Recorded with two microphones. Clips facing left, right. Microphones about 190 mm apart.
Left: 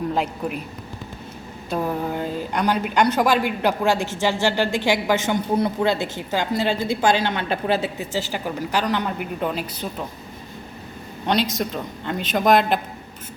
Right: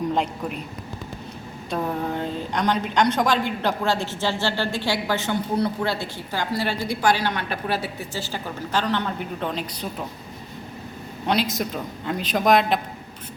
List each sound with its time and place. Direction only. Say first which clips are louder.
0.1 s a man's voice: left 1 dB; 5° left (ahead or behind)
1.7 s a woman's voice: left 2 dB; 5° left (ahead or behind)
11.3 s a man's voice: left 1 dB; centre (ahead or behind)